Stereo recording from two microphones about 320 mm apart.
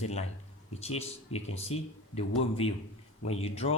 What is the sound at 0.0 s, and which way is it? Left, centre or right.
Speech, centre.